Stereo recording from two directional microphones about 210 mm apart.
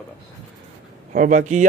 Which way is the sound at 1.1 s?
40° right (ahead or behind).